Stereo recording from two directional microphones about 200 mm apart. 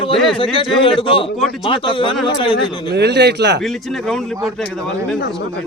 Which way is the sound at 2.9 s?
55° right (ahead or behind).